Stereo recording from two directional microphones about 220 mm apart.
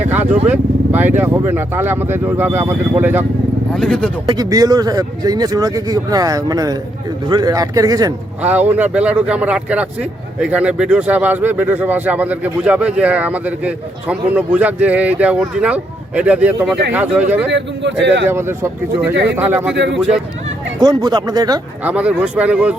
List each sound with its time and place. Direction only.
0.0 s vehicle: 10° right (ahead or behind)
0.4 s speech: 10° right (ahead or behind)
3.8 s speech: 5° left (ahead or behind)
4.3 s speech: 15° right (ahead or behind)
17.5 s speech: 55° right (ahead or behind)
18.3 s speech: 10° right (ahead or behind)
19.1 s speech: 50° right (ahead or behind)
19.4 s speech: 10° right (ahead or behind)
19.7 s speech: 55° right (ahead or behind)
20.7 s speech: 20° right (ahead or behind)
21.8 s speech: 5° right (ahead or behind)